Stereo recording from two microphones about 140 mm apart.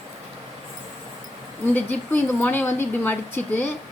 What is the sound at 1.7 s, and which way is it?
Speech, 15° left (ahead or behind).